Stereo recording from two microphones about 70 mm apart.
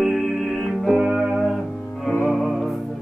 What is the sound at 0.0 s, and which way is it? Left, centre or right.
Music, centre.